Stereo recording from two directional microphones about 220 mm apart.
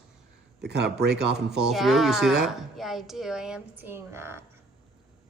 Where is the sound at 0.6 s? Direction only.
50° right (ahead or behind).